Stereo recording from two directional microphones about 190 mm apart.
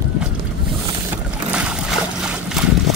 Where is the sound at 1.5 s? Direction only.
5° right (ahead or behind).